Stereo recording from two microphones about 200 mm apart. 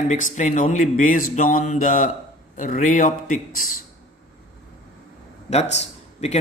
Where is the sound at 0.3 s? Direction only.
40° left (ahead or behind).